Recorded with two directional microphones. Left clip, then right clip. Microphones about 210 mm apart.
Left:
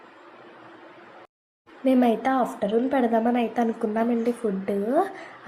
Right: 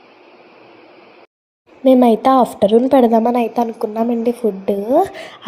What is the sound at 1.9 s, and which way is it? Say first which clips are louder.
A woman's voice: right 10 dB; 30° right (ahead or behind).